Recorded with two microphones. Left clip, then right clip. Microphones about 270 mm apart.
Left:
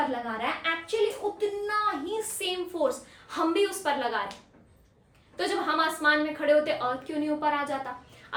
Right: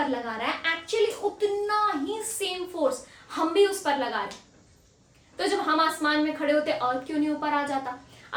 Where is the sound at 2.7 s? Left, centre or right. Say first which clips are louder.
Right 2 dB; centre.